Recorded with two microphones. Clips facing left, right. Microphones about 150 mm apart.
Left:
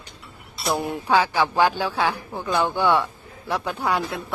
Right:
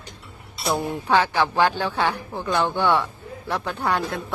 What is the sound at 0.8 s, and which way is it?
A woman's voice, 15° left (ahead or behind).